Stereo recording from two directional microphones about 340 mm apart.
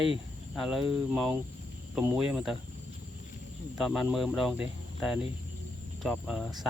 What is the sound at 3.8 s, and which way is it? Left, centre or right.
Speech, centre.